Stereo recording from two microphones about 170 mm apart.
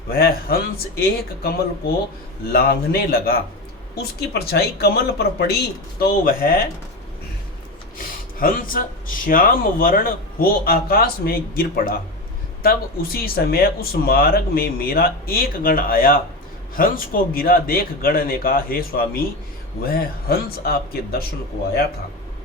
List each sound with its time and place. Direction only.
0.1 s speech: 60° left (ahead or behind)
6.0 s speech: 60° left (ahead or behind)
8.4 s speech: 55° left (ahead or behind)